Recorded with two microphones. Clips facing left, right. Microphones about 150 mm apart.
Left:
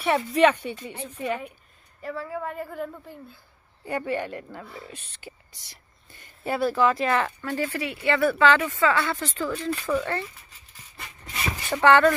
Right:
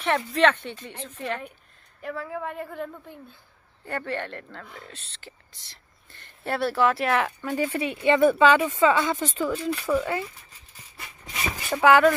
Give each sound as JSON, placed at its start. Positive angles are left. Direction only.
{"t": 0.0, "sound": "a woman's voice", "side_deg": 10}
{"t": 7.4, "sound": "speech", "side_deg": -15}
{"t": 11.7, "sound": "speech", "side_deg": -10}